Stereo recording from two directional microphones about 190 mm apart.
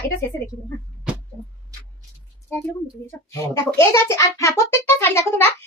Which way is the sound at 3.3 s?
15° left (ahead or behind).